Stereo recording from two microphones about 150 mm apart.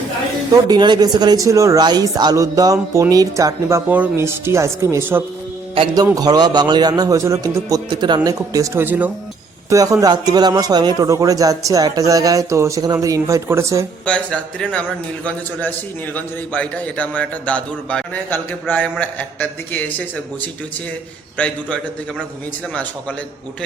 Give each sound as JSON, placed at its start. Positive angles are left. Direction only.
{"t": 0.5, "sound": "speech", "side_deg": -30}
{"t": 5.7, "sound": "a man's voice", "side_deg": -30}
{"t": 14.0, "sound": "a man's voice", "side_deg": 10}
{"t": 21.3, "sound": "a man's voice", "side_deg": 10}